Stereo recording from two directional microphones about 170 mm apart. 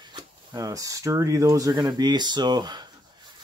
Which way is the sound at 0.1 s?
20° right (ahead or behind).